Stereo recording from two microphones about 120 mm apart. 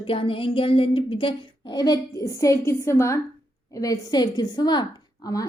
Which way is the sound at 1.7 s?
35° left (ahead or behind).